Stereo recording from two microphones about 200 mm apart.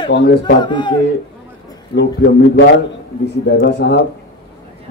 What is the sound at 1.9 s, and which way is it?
Speech, 75° left (ahead or behind).